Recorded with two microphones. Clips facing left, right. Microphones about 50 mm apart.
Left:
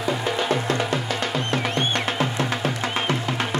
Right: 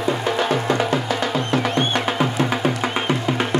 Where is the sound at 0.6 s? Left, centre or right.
Right.